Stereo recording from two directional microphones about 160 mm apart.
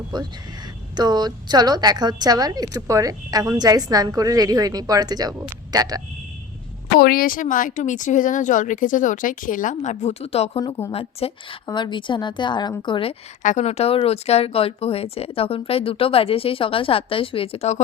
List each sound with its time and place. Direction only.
0.1 s a woman's voice: 25° right (ahead or behind)
6.9 s speech: 65° left (ahead or behind); by 13.1 s 30° left (ahead or behind)
13.4 s speech: 50° left (ahead or behind)